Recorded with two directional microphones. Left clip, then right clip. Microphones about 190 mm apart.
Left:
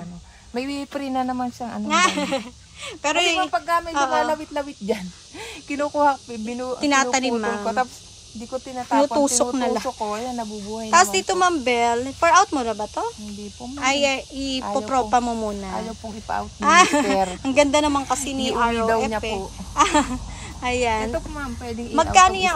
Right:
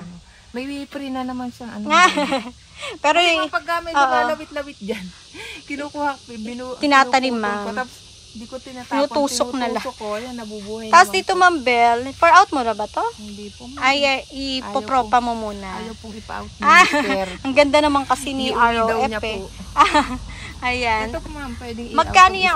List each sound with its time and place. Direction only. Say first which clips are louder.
0.6 s speech: left 2 dB; 30° left (ahead or behind)
1.9 s speech: right 5 dB; 5° left (ahead or behind)
3.4 s speech: left 1 dB; 45° left (ahead or behind)
3.9 s speech: right 9 dB; 5° left (ahead or behind)
4.6 s speech: left 2 dB; 45° left (ahead or behind)
6.8 s speech: right 5 dB; 10° left (ahead or behind)
7.6 s speech: left 3 dB; 35° left (ahead or behind)
8.9 s speech: left 1 dB; 15° left (ahead or behind)